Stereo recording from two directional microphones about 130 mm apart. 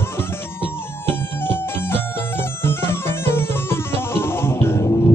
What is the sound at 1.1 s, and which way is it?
Music, 15° left (ahead or behind).